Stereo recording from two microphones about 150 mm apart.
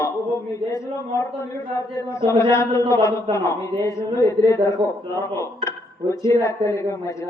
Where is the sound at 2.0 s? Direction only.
20° left (ahead or behind).